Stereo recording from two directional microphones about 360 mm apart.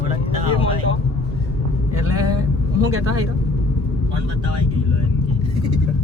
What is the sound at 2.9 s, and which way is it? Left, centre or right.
Speech, right.